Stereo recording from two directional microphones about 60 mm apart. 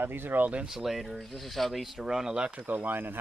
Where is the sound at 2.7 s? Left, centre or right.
Right.